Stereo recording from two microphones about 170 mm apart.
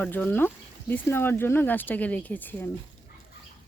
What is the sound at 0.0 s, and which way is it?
Speech, 10° left (ahead or behind).